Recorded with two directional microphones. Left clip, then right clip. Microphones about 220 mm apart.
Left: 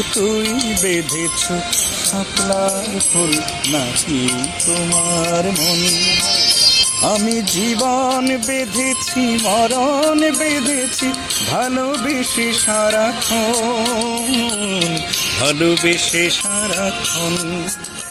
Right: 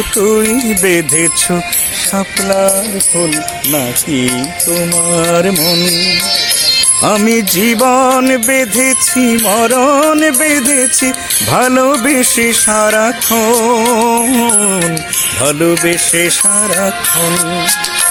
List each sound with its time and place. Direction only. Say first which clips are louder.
0.4 s music: right 5 dB; centre (ahead or behind)
0.8 s music: right 8 dB; 45° right (ahead or behind)
3.2 s music: right 3 dB; 35° right (ahead or behind)
5.6 s music: right 4 dB; 10° right (ahead or behind)
7.7 s music: right 8 dB; 45° right (ahead or behind)
9.7 s music: right 6 dB; 50° right (ahead or behind)
11.5 s music: right 11 dB; 55° right (ahead or behind)
15.4 s music: right 4 dB; 35° right (ahead or behind)